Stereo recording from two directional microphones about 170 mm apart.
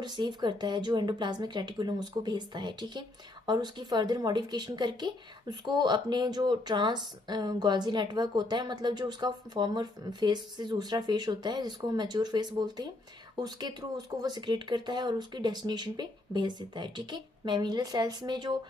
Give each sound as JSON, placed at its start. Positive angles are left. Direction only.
{"t": 0.0, "sound": "speech", "side_deg": -25}